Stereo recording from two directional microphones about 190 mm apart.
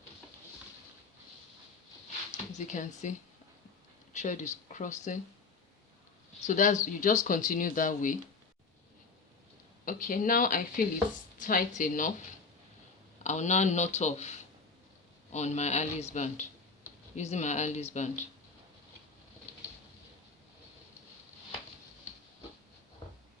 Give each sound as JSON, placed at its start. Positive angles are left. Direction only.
{"t": 2.3, "sound": "speech", "side_deg": 40}
{"t": 6.4, "sound": "speech", "side_deg": 40}
{"t": 9.8, "sound": "speech", "side_deg": 45}
{"t": 13.2, "sound": "speech", "side_deg": 35}